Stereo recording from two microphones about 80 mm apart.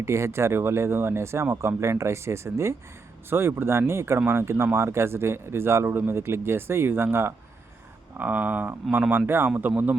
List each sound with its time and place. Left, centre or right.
0.0 s speech: right